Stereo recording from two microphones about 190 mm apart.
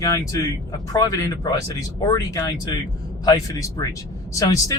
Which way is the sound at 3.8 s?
20° left (ahead or behind).